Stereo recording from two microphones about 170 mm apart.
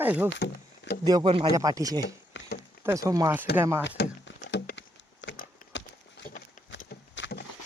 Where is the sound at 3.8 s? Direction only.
90° left.